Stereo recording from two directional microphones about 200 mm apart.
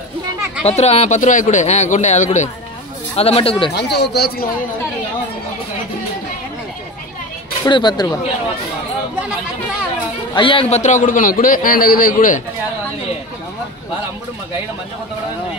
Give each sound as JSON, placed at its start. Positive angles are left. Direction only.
{"t": 0.7, "sound": "a man's voice", "side_deg": 30}
{"t": 3.7, "sound": "a man's voice", "side_deg": 55}
{"t": 7.6, "sound": "speech", "side_deg": 20}
{"t": 10.3, "sound": "a man's voice", "side_deg": 25}